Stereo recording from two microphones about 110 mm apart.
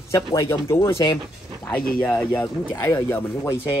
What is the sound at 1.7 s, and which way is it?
Speech, 5° left (ahead or behind).